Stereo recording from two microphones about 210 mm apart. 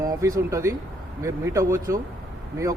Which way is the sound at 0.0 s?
15° right (ahead or behind).